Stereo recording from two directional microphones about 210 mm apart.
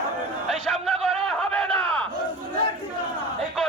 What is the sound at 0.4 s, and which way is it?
Crowd, centre (ahead or behind).